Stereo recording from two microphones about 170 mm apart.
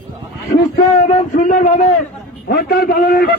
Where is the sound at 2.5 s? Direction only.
65° left (ahead or behind).